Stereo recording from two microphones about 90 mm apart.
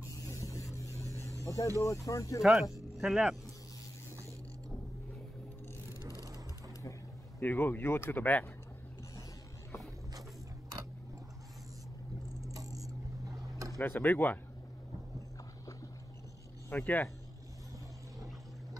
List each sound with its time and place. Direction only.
0.1 s a sound: 40° left (ahead or behind)
1.4 s vehicle: 35° left (ahead or behind)
1.8 s speech: 35° left (ahead or behind)
2.4 s speech: 5° right (ahead or behind)
6.0 s vehicle: 45° right (ahead or behind)
7.3 s speech: 20° left (ahead or behind)
12.4 s a sound: 40° right (ahead or behind)
13.7 s speech: 20° left (ahead or behind)
16.6 s speech: 20° left (ahead or behind)